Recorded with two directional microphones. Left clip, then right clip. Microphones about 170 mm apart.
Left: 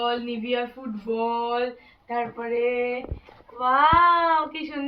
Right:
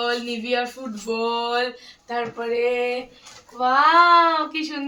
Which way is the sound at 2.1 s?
40° right (ahead or behind).